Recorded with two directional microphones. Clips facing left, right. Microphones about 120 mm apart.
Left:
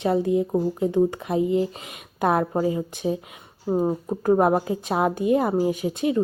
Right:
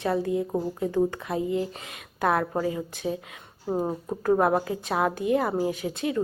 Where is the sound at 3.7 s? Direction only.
5° left (ahead or behind).